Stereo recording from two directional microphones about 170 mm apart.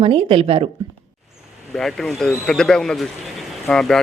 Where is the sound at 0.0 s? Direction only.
30° right (ahead or behind).